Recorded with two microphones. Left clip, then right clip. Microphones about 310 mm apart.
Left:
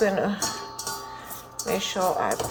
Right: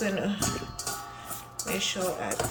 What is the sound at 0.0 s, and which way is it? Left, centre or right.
Speech, centre.